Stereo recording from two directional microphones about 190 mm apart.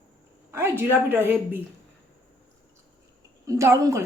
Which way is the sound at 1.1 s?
10° right (ahead or behind).